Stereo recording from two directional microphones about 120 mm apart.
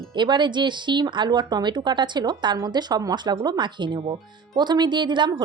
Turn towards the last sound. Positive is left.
turn(degrees=-40)  # may be behind; listen again after turning